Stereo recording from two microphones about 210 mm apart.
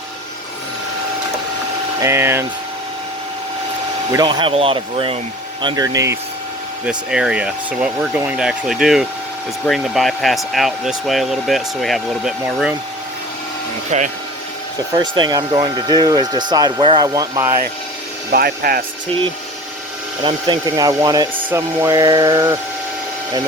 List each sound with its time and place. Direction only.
2.0 s speech: 10° right (ahead or behind)
4.1 s speech: 20° right (ahead or behind)
6.8 s speech: 5° right (ahead or behind)
13.9 s speech: 35° right (ahead or behind)
14.9 s speech: 20° right (ahead or behind)
18.3 s speech: 45° right (ahead or behind)
20.2 s speech: 20° right (ahead or behind)